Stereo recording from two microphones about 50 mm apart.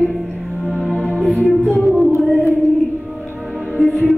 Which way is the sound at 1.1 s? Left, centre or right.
Centre.